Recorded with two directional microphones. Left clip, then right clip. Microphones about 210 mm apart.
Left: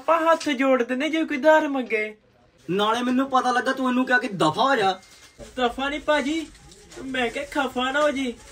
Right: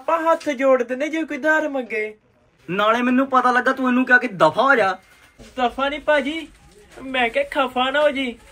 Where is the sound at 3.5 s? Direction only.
20° right (ahead or behind).